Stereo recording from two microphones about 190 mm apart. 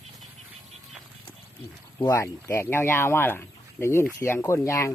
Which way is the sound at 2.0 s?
15° left (ahead or behind).